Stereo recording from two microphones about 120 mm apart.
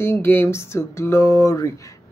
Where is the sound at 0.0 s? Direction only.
20° left (ahead or behind).